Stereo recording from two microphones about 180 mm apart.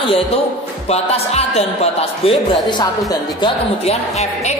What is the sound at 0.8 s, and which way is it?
Speech, 35° left (ahead or behind).